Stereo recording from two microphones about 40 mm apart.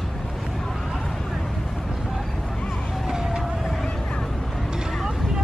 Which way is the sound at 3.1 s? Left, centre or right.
Centre.